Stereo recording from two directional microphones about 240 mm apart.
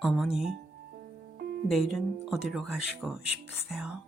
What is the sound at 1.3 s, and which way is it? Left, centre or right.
Music, right.